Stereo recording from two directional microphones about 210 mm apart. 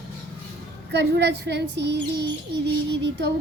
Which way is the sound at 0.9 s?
55° right (ahead or behind).